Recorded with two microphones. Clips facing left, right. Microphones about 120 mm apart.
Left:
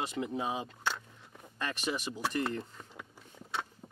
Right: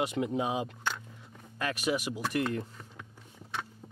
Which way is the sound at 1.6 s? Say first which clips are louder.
Right 4 dB; 5° right (ahead or behind).